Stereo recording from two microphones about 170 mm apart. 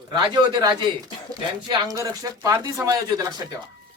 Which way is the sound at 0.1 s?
25° right (ahead or behind).